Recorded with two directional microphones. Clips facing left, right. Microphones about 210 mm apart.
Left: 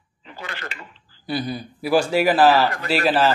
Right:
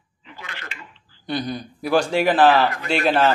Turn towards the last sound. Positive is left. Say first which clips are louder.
# even
turn(degrees=0)  # may be behind; listen again after turning